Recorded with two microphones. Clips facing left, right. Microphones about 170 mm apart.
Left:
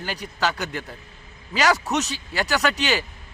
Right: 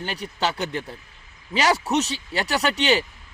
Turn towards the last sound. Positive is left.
turn(degrees=-30)  # may be behind; listen again after turning